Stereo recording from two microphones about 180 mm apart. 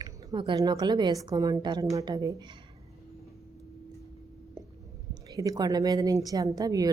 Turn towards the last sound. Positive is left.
turn(degrees=-20)  # may be behind; listen again after turning